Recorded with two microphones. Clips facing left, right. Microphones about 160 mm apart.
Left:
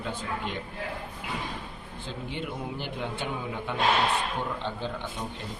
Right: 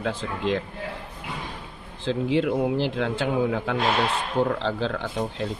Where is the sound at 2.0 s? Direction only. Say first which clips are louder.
Right 13 dB; 90° right.